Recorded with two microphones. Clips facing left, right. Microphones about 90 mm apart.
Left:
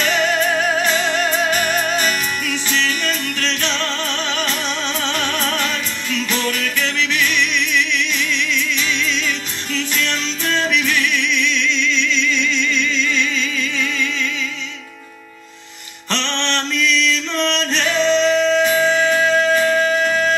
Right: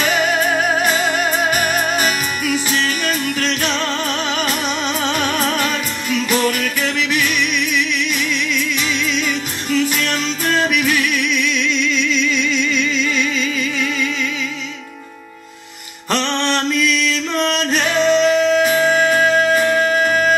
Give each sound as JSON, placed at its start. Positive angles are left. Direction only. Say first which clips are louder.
{"t": 0.0, "sound": "music", "louder": "right 1 dB", "side_deg": -10}
{"t": 16.1, "sound": "music", "louder": "right 4 dB", "side_deg": -10}